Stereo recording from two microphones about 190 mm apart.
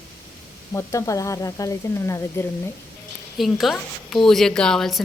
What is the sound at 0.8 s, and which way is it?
Speech, 15° left (ahead or behind).